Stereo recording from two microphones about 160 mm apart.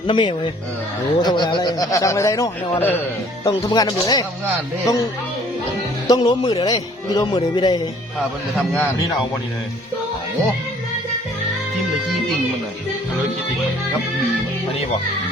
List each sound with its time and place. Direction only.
0.1 s speech: 30° left (ahead or behind); by 3.0 s 10° left (ahead or behind)
3.4 s speech: 25° left (ahead or behind)
6.1 s speech: 30° left (ahead or behind)
8.5 s a man's voice: 5° left (ahead or behind)